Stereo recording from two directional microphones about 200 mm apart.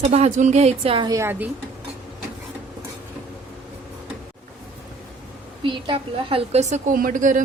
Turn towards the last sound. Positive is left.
turn(degrees=-40)  # may be behind; listen again after turning